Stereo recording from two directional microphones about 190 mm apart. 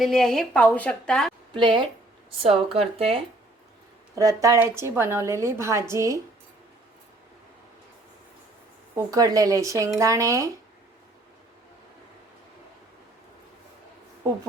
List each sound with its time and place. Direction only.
0.0 s a woman's voice: centre (ahead or behind)
1.5 s speech: 25° right (ahead or behind)
4.1 s a woman's voice: 20° right (ahead or behind)
9.0 s a woman's voice: 20° right (ahead or behind)